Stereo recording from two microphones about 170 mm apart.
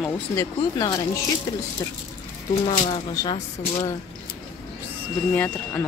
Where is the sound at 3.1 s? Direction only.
25° left (ahead or behind).